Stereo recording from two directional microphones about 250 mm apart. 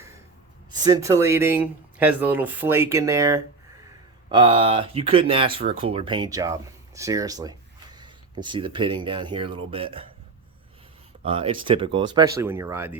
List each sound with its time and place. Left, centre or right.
0.7 s speech: centre
11.3 s speech: right